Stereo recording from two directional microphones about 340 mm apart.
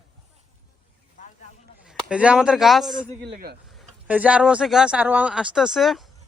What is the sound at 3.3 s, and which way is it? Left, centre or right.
Speech, right.